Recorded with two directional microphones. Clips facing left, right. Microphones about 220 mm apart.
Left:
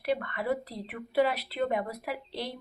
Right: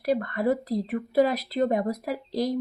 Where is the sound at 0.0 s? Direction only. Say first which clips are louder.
Right 6 dB; 40° right (ahead or behind).